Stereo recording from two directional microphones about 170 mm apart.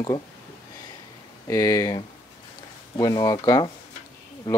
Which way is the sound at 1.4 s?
20° left (ahead or behind).